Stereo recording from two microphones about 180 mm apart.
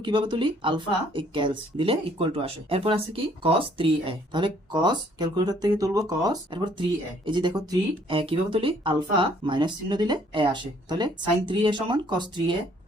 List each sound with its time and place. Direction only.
0.0 s speech: 25° right (ahead or behind)